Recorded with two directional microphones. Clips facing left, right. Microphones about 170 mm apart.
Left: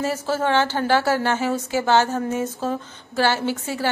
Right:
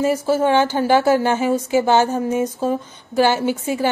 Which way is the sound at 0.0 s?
15° right (ahead or behind).